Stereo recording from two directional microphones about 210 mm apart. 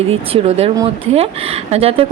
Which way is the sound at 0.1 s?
30° right (ahead or behind).